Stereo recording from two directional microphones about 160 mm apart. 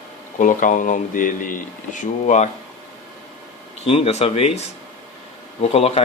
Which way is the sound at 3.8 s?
40° left (ahead or behind).